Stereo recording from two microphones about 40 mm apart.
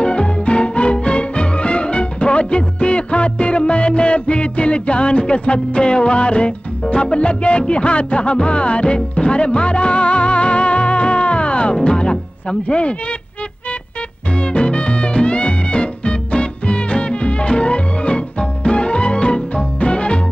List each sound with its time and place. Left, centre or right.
0.0 s music: left
14.3 s music: left